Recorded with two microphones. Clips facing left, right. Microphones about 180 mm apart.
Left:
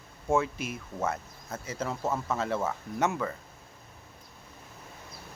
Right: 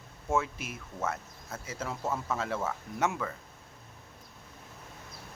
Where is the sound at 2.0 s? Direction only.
10° left (ahead or behind).